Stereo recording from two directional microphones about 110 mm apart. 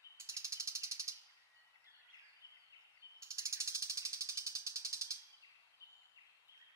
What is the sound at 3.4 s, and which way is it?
Ratchet, 25° right (ahead or behind).